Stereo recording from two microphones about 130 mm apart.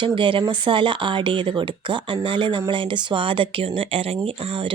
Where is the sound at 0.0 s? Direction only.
40° right (ahead or behind).